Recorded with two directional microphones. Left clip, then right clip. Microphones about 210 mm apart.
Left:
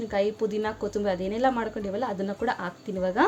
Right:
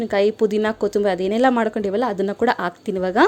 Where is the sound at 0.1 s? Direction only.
50° right (ahead or behind).